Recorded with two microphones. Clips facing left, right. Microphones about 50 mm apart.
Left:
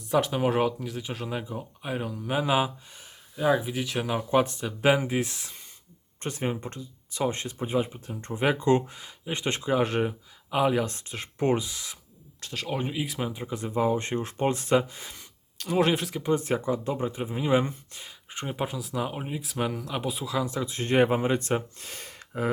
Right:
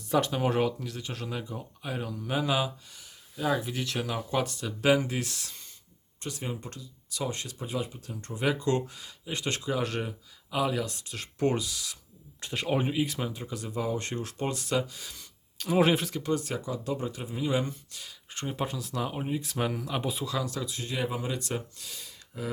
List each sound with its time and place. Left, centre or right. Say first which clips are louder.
0.1 s speech: left 2 dB; centre
6.2 s speech: left 6 dB; left
12.4 s speech: right 2 dB; centre
13.0 s speech: even; centre; by 15.2 s left
15.5 s speech: even; centre
16.2 s speech: left 5 dB; left
18.3 s speech: left 2 dB; centre
20.4 s speech: left 4 dB; left
20.7 s speech: left 13 dB; left